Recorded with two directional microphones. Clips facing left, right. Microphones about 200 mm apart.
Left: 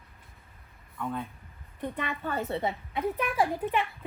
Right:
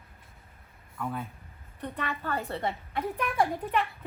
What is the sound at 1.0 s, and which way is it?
Speech, 5° right (ahead or behind).